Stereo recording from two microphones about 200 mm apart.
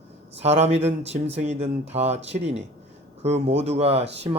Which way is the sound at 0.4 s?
30° right (ahead or behind).